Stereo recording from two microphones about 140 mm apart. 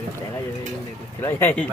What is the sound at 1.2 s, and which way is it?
Speech, 15° left (ahead or behind).